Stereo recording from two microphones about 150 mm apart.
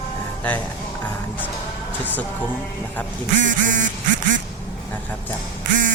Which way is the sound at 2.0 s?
10° left (ahead or behind).